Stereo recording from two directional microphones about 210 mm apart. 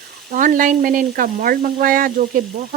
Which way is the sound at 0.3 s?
40° right (ahead or behind).